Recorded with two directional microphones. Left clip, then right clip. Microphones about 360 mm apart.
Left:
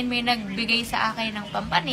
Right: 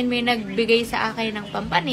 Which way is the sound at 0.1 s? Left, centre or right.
Centre.